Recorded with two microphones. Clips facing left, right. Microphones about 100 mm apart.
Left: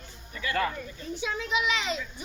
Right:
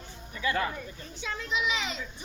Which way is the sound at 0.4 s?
20° right (ahead or behind).